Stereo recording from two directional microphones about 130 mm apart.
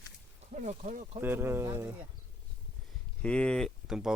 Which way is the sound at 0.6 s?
65° right (ahead or behind).